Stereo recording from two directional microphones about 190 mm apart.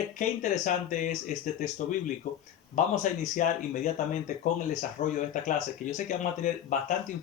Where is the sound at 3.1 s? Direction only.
45° left (ahead or behind).